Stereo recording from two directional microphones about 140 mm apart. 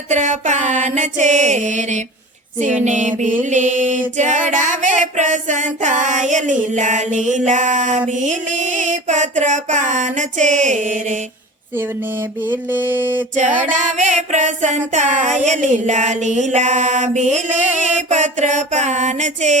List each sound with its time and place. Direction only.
0.1 s mantra: 60° right (ahead or behind)
11.7 s a sound: 15° right (ahead or behind)
13.6 s mantra: 60° right (ahead or behind)